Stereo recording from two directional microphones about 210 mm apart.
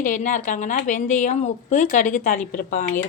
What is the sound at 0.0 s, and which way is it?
A woman's voice, 40° left (ahead or behind).